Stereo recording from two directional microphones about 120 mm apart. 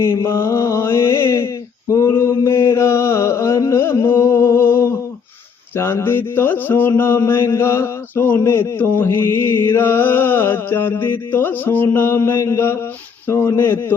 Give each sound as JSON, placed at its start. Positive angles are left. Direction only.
{"t": 0.0, "sound": "mantra", "side_deg": 25}